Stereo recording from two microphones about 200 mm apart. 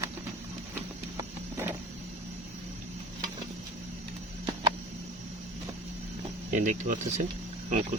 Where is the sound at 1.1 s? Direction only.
15° right (ahead or behind).